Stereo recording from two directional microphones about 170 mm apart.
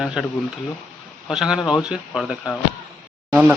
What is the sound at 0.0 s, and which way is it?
Speech, centre (ahead or behind).